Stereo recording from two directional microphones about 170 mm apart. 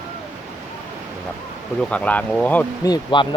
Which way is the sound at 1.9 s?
5° left (ahead or behind).